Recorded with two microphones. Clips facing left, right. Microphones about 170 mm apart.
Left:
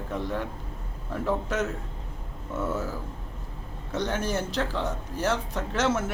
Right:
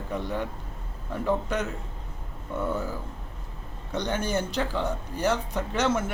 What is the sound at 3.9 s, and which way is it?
A man's voice, centre (ahead or behind).